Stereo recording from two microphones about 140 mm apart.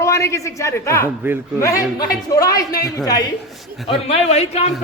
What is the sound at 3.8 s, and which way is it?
Speech, 45° left (ahead or behind).